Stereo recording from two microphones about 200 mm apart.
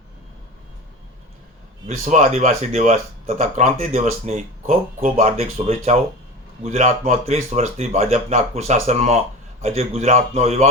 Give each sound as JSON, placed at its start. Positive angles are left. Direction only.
{"t": 2.0, "sound": "speech", "side_deg": -35}